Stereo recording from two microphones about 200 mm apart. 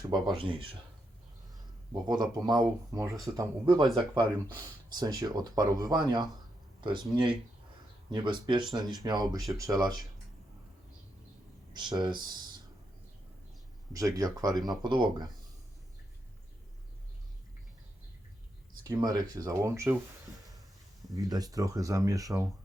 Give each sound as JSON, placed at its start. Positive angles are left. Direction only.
{"t": 0.3, "sound": "speech", "side_deg": -25}
{"t": 2.0, "sound": "speech", "side_deg": -20}
{"t": 11.7, "sound": "speech", "side_deg": -20}
{"t": 13.9, "sound": "speech", "side_deg": -15}
{"t": 18.9, "sound": "speech", "side_deg": -20}
{"t": 21.2, "sound": "speech", "side_deg": -20}